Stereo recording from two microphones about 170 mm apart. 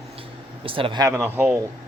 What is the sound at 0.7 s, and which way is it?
Speech, 30° right (ahead or behind).